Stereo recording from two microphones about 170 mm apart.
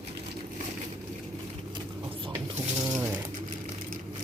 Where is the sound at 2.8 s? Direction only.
20° right (ahead or behind).